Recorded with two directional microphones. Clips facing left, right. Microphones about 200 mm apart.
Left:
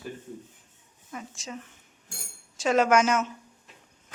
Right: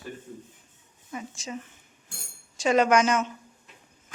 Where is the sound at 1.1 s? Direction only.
Centre (ahead or behind).